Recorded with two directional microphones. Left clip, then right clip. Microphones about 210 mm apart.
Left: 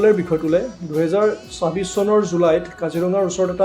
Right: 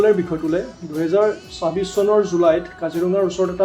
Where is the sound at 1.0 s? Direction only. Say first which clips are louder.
Right 1 dB; 35° left (ahead or behind).